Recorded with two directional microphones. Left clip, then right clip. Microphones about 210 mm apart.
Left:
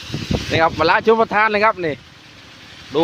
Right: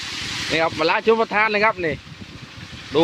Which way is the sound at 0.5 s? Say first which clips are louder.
Left 5 dB; 15° left (ahead or behind).